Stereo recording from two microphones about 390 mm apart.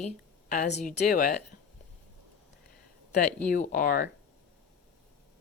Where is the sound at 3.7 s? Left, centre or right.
Left.